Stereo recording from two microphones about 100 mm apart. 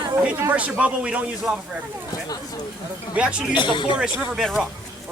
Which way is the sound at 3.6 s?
55° left (ahead or behind).